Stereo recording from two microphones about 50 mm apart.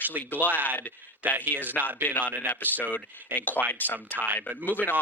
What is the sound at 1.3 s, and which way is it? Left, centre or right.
Speech, left.